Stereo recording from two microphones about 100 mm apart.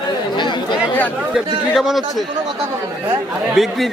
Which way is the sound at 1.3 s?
Centre (ahead or behind).